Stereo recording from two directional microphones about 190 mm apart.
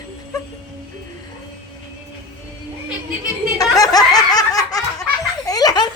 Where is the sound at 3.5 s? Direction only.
20° left (ahead or behind).